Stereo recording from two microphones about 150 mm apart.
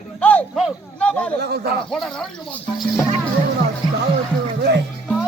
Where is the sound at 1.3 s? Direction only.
90° right.